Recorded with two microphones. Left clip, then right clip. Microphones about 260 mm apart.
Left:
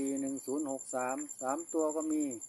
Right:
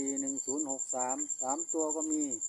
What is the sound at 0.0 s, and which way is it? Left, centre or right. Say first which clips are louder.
Speech: even; centre.